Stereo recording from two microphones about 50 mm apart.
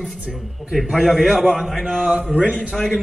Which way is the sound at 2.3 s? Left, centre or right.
Right.